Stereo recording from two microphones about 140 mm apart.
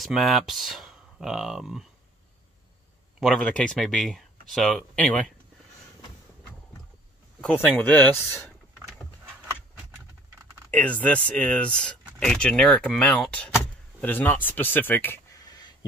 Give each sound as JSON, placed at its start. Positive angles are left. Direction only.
{"t": 0.0, "sound": "speech", "side_deg": 0}
{"t": 3.2, "sound": "speech", "side_deg": 5}
{"t": 7.4, "sound": "speech", "side_deg": 10}
{"t": 10.7, "sound": "speech", "side_deg": 10}
{"t": 12.0, "sound": "a sound", "side_deg": -10}
{"t": 12.3, "sound": "speech", "side_deg": 5}
{"t": 15.3, "sound": "a sound", "side_deg": 30}